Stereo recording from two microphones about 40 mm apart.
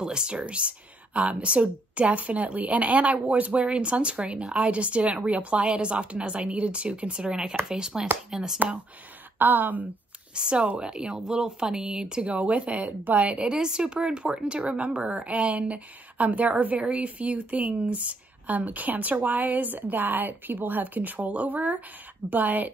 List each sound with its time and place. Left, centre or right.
0.0 s a woman's voice: right
9.4 s a woman's voice: right
10.3 s a woman's voice: right
12.2 s a woman's voice: right
13.9 s a woman's voice: right